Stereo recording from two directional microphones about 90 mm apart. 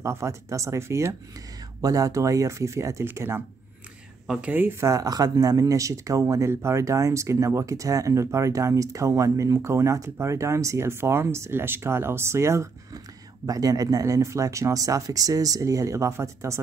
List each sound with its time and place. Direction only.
0.0 s speech: 30° right (ahead or behind)
1.8 s speech: 40° right (ahead or behind); by 4.8 s 25° right (ahead or behind)
4.8 s speech: 40° right (ahead or behind)